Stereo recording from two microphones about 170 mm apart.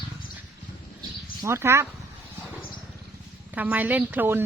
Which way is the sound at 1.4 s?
15° right (ahead or behind).